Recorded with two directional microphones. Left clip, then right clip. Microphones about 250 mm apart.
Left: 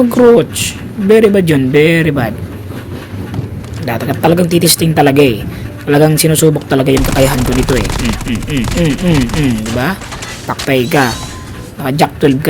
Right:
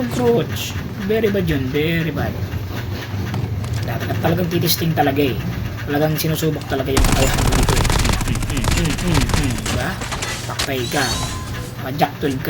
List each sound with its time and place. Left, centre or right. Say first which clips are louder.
0.3 s speech: left 10 dB; left
3.8 s speech: left 10 dB; left
6.9 s speech: left 7 dB; centre
10.8 s speech: left 8 dB; centre
11.9 s speech: left 9 dB; left